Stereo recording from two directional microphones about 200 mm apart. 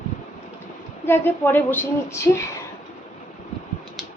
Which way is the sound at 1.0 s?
10° left (ahead or behind).